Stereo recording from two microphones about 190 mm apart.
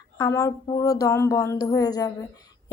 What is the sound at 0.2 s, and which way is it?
Speech, 15° left (ahead or behind).